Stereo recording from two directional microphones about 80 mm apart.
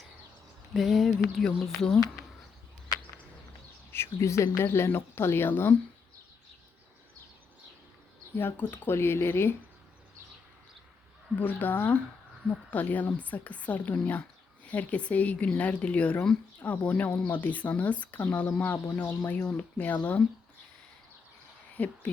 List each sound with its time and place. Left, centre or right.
0.7 s speech: centre
3.9 s speech: left
8.4 s speech: left
11.3 s speech: left
21.8 s speech: centre